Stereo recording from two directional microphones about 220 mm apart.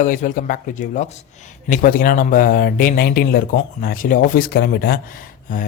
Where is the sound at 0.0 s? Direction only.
35° left (ahead or behind).